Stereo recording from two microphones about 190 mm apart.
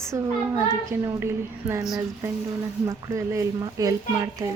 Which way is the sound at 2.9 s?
15° right (ahead or behind).